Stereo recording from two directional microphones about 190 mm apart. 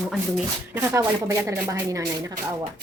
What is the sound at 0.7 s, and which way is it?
Speech, 15° right (ahead or behind).